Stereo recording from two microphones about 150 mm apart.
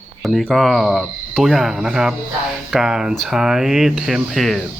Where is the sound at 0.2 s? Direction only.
Centre (ahead or behind).